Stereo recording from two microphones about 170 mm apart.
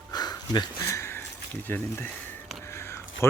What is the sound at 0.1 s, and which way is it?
Sniff, 25° left (ahead or behind).